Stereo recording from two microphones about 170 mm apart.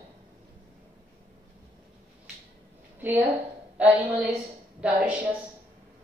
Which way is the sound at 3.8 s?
10° right (ahead or behind).